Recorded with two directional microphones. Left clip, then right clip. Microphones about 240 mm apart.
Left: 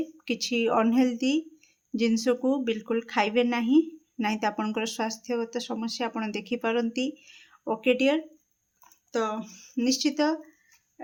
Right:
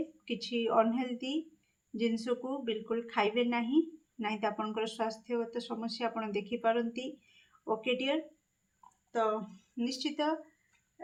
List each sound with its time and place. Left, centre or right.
0.3 s a woman's voice: left
9.7 s a woman's voice: left